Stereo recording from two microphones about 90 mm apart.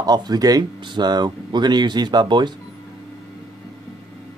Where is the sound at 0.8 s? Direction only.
55° right (ahead or behind).